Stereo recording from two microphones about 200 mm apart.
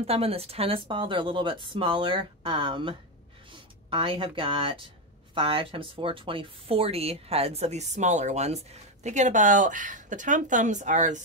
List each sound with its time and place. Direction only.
0.0 s speech: 30° right (ahead or behind)